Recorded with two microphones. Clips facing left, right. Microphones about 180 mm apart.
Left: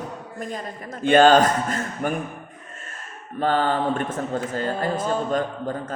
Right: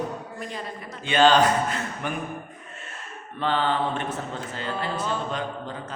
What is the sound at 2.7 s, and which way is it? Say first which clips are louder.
Owl: even; 45° left (ahead or behind).